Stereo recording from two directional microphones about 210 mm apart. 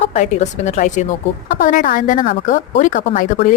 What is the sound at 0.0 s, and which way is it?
A woman's voice, 30° left (ahead or behind).